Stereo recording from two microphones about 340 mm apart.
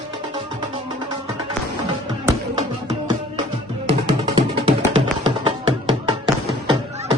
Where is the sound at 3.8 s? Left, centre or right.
Centre.